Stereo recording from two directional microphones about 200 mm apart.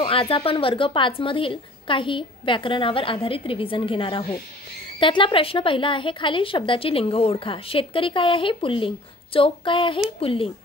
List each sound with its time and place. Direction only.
0.0 s a woman's voice: 25° left (ahead or behind)